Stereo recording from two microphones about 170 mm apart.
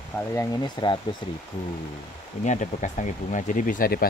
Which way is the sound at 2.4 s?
45° left (ahead or behind).